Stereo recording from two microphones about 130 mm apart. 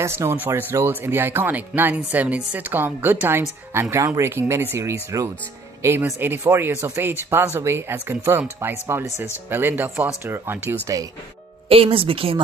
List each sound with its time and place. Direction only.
0.0 s speech: 20° right (ahead or behind)
11.7 s speech: 45° right (ahead or behind)